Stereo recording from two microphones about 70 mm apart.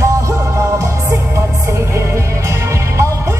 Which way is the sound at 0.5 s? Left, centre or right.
Right.